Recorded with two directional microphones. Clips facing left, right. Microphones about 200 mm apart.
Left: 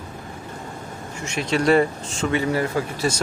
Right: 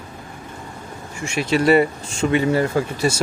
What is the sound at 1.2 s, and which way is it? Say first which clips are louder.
Speech: right 3 dB; 10° right (ahead or behind).